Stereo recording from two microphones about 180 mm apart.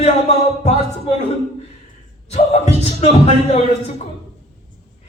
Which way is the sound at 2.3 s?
35° left (ahead or behind).